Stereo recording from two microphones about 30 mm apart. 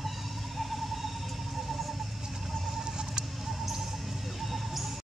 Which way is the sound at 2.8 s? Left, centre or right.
Right.